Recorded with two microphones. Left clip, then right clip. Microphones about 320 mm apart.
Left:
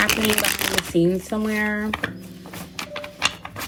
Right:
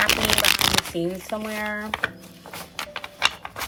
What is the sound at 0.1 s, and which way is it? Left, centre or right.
Shuffling cards, right.